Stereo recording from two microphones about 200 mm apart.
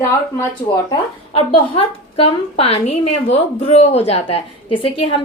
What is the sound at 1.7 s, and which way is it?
A woman's voice, 30° left (ahead or behind).